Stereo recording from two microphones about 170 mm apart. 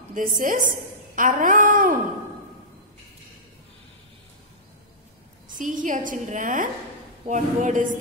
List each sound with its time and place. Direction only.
0.1 s a woman's voice: 50° right (ahead or behind)
5.6 s a woman's voice: 50° right (ahead or behind)